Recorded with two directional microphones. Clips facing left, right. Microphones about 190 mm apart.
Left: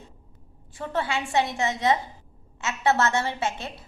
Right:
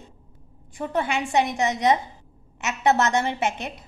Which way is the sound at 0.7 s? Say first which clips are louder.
Right 3 dB; 15° right (ahead or behind).